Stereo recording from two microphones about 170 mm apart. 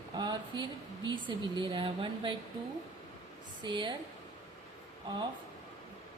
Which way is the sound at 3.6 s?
25° right (ahead or behind).